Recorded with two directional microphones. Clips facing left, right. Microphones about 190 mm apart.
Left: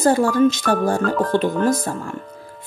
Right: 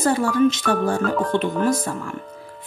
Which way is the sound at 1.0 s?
Centre (ahead or behind).